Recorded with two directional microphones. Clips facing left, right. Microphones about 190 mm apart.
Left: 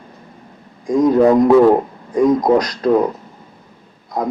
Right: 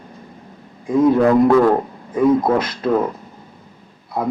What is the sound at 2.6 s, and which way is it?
Speech, 40° left (ahead or behind).